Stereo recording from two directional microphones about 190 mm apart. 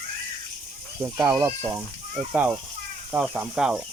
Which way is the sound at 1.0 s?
15° right (ahead or behind).